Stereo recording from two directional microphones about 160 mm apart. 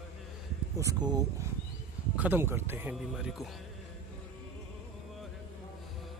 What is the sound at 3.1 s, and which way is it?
Speech, centre (ahead or behind).